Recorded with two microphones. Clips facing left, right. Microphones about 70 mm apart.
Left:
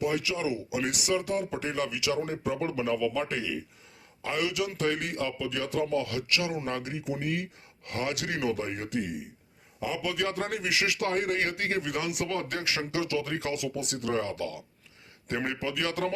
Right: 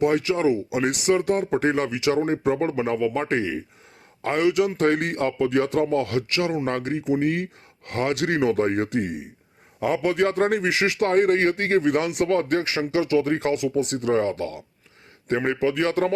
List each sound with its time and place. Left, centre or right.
0.0 s a man's voice: right